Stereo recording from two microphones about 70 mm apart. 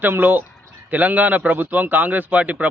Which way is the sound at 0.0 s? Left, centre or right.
Right.